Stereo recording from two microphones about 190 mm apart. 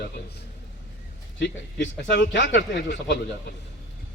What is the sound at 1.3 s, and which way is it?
Speech, 65° left (ahead or behind).